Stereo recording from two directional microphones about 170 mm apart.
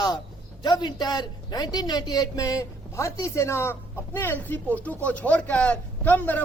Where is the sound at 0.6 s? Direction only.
25° left (ahead or behind).